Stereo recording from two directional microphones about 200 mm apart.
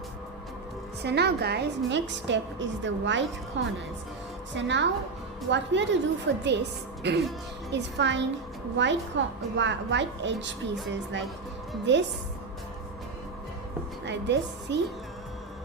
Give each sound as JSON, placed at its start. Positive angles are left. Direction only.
{"t": 1.0, "sound": "a woman's voice", "side_deg": -55}
{"t": 14.0, "sound": "a woman's voice", "side_deg": -60}